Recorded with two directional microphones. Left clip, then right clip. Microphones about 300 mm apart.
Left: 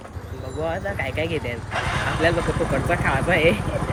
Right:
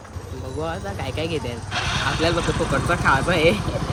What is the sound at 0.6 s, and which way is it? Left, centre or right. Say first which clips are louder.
Speech: left 4 dB; centre.